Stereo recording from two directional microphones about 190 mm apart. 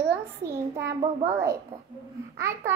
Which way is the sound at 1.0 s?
30° right (ahead or behind).